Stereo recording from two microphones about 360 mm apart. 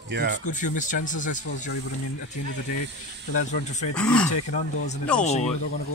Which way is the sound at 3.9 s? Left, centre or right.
Centre.